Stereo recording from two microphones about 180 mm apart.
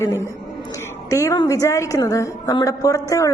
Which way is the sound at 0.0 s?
15° left (ahead or behind).